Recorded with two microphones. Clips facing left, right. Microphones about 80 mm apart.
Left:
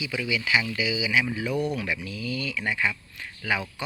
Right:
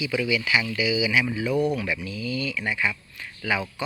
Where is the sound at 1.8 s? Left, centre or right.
Left.